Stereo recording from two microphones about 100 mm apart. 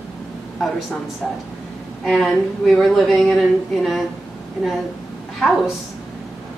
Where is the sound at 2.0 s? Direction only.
Centre (ahead or behind).